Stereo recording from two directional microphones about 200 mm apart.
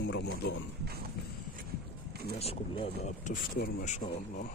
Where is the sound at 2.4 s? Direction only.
30° left (ahead or behind).